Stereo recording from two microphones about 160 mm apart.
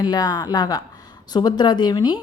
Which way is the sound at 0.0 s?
25° left (ahead or behind).